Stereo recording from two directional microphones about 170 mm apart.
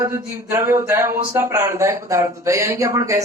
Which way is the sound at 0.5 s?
15° right (ahead or behind).